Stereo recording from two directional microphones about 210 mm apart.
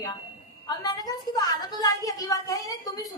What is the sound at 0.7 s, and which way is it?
A woman's voice, 20° left (ahead or behind).